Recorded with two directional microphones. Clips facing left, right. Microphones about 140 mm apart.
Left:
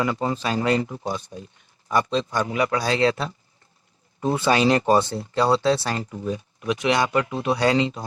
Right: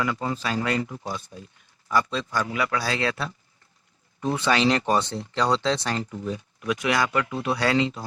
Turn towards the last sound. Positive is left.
turn(degrees=20)  # may be behind; listen again after turning